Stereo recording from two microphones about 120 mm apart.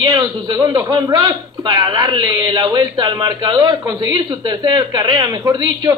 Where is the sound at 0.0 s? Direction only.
35° right (ahead or behind).